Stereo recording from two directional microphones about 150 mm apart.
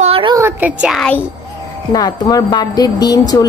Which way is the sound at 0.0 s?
40° right (ahead or behind).